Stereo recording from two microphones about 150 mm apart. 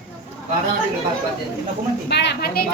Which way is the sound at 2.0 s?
90° left.